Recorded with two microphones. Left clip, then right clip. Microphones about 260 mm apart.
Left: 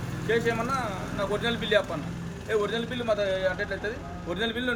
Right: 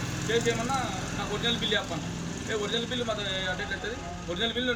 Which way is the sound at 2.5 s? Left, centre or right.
Centre.